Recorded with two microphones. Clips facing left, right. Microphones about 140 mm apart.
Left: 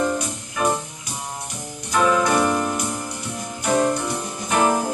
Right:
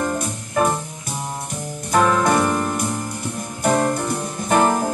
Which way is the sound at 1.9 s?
50° right (ahead or behind).